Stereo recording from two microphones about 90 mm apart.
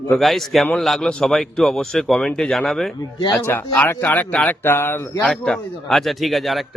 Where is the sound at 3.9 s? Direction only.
20° left (ahead or behind).